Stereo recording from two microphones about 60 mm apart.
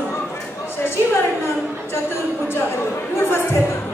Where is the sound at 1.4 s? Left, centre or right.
Left.